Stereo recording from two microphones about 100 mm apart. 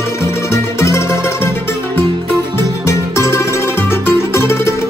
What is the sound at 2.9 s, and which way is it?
Music, 30° left (ahead or behind).